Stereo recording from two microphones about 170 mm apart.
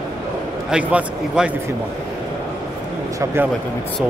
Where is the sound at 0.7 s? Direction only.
10° right (ahead or behind).